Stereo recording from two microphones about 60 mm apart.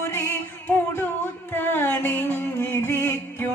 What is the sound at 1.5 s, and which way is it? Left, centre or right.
Music, left.